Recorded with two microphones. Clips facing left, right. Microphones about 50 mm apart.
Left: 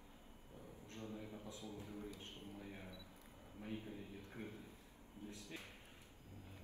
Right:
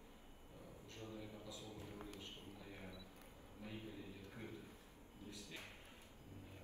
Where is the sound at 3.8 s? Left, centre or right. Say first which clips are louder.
Left 1 dB; left.